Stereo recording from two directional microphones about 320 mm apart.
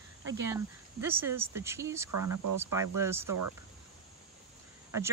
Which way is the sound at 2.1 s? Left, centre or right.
Right.